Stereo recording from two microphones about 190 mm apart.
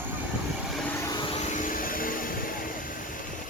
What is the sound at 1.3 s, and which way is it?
Vehicle, 40° left (ahead or behind).